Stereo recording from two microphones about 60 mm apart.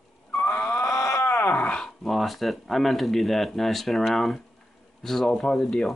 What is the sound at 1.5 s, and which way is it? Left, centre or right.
Wail, left.